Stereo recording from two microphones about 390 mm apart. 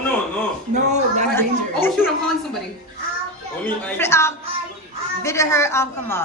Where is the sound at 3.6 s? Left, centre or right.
Centre.